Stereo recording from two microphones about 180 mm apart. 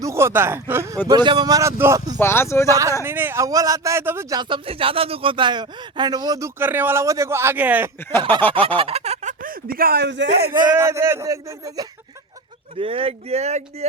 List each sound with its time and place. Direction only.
0.0 s a man's voice: 15° right (ahead or behind)
1.0 s speech: 25° right (ahead or behind)
2.1 s speech: 15° left (ahead or behind)
2.6 s a man's voice: 20° right (ahead or behind)
8.4 s speech: 10° left (ahead or behind)
8.6 s a sound: 30° right (ahead or behind)
9.4 s speech: 55° right (ahead or behind); by 10.5 s 70° right (ahead or behind)
10.7 s a man's voice: 15° right (ahead or behind)
12.7 s speech: 30° right (ahead or behind)